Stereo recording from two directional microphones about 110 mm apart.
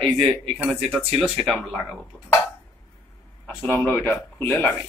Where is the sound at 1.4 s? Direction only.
Centre (ahead or behind).